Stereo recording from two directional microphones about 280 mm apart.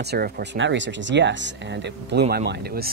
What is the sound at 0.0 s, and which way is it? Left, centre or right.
Speech, right.